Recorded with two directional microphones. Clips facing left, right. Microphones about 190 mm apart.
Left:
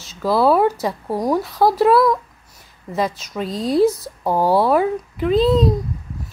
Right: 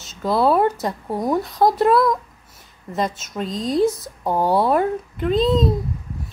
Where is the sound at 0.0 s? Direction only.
5° left (ahead or behind).